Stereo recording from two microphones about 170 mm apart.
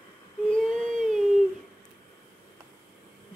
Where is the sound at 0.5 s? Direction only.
5° left (ahead or behind).